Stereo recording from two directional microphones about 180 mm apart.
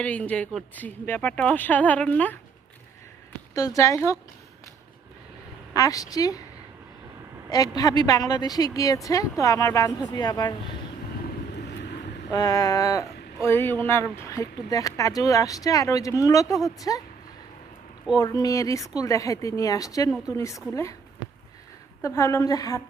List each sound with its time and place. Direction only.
0.0 s speech: 5° left (ahead or behind)
3.5 s speech: 20° left (ahead or behind)
5.7 s speech: 20° left (ahead or behind)
7.8 s speech: 20° left (ahead or behind)
11.5 s vehicle: 70° left (ahead or behind)
12.3 s speech: 20° left (ahead or behind)
18.2 s speech: 20° left (ahead or behind)
22.0 s speech: 15° left (ahead or behind)